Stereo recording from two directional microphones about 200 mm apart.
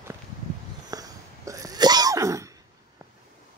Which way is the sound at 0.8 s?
15° right (ahead or behind).